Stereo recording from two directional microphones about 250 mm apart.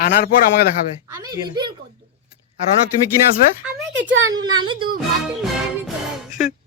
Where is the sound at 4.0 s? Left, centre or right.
Right.